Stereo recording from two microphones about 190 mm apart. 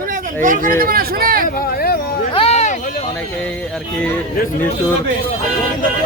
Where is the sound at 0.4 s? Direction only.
45° right (ahead or behind).